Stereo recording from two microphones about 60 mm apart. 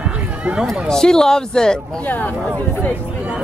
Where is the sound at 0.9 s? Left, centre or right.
Centre.